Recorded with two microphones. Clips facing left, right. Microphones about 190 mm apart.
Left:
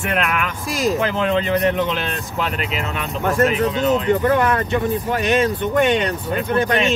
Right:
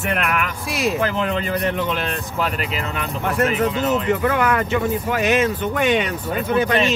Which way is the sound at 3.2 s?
40° left (ahead or behind).